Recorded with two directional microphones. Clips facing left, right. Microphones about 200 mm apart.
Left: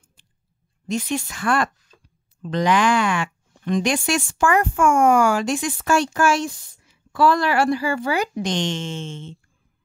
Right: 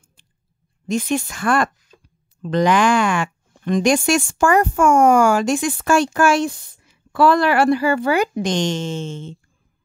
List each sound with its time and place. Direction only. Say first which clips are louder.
0.8 s speech: right 4 dB; 50° right (ahead or behind)